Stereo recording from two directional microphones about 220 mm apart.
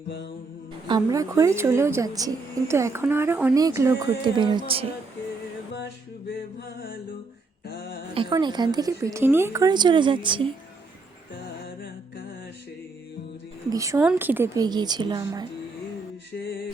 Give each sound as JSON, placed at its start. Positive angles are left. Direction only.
{"t": 0.9, "sound": "a woman's voice", "side_deg": -15}
{"t": 7.7, "sound": "music", "side_deg": 45}
{"t": 8.1, "sound": "a woman's voice", "side_deg": -20}
{"t": 13.7, "sound": "a woman's voice", "side_deg": -15}